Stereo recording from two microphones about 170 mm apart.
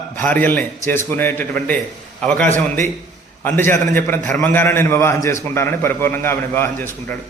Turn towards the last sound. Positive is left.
turn(degrees=15)  # may be behind; listen again after turning